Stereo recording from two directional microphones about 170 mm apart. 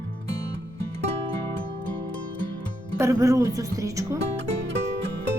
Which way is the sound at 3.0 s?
20° right (ahead or behind).